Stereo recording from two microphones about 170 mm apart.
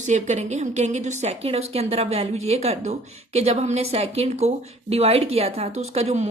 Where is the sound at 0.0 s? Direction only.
45° right (ahead or behind).